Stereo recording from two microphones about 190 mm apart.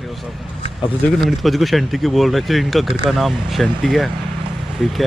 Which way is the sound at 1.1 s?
Centre (ahead or behind).